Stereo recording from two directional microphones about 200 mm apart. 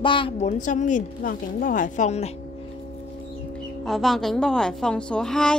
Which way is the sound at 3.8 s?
Centre (ahead or behind).